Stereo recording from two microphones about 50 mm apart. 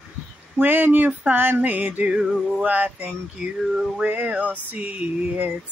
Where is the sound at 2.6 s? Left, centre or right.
Right.